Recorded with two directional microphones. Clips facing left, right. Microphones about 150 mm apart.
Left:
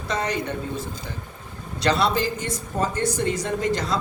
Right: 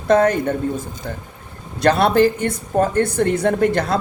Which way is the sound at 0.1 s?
50° right (ahead or behind).